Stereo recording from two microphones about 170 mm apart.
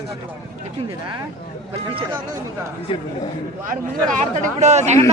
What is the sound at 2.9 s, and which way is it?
Speech, 30° left (ahead or behind).